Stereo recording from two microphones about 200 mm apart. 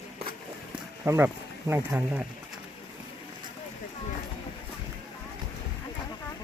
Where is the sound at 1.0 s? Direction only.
10° right (ahead or behind).